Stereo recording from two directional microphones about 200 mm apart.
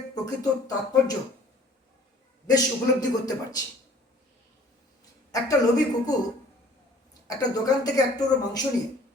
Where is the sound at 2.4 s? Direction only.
20° left (ahead or behind).